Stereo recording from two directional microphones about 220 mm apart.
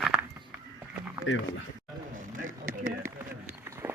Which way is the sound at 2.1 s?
40° right (ahead or behind).